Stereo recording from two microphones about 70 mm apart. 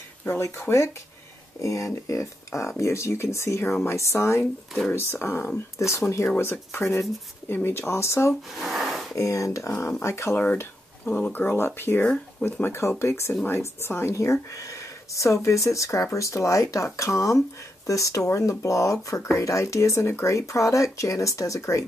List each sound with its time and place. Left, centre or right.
0.3 s speech: left
6.3 s speech: left
8.5 s a sound: centre
9.1 s speech: left
10.3 s speech: left
12.0 s speech: centre
12.6 s speech: left
14.1 s speech: left